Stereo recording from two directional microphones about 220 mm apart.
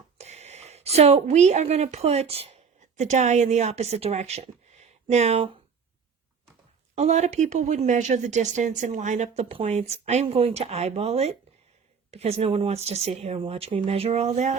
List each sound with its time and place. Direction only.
0.2 s a woman's voice: 30° right (ahead or behind)
6.9 s speech: 30° right (ahead or behind)